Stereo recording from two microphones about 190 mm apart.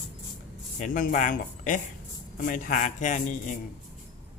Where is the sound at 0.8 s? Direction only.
45° left (ahead or behind).